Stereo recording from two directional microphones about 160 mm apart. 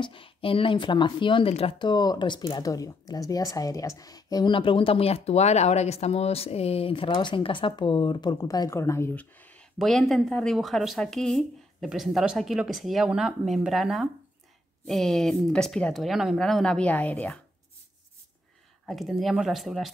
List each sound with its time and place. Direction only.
0.0 s speech: 35° left (ahead or behind); by 17.4 s 10° left (ahead or behind)
18.9 s speech: centre (ahead or behind)